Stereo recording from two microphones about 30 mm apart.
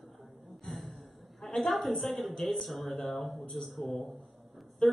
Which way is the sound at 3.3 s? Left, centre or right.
Left.